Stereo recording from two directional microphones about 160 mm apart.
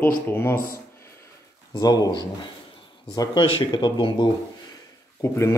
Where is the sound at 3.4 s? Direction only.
30° left (ahead or behind).